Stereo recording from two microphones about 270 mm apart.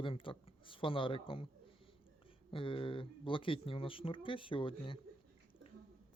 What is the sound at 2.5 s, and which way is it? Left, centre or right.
Speech, centre.